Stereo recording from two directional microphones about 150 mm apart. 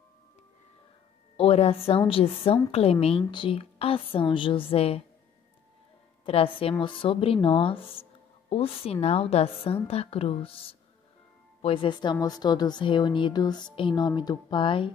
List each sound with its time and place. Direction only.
1.3 s a woman's voice: 40° left (ahead or behind)
6.2 s a woman's voice: 40° left (ahead or behind)